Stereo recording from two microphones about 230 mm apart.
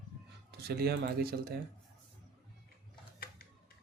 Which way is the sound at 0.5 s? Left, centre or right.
Right.